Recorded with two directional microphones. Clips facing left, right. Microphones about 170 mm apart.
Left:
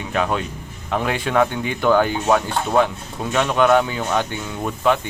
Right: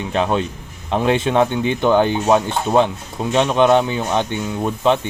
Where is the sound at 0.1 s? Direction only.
25° right (ahead or behind).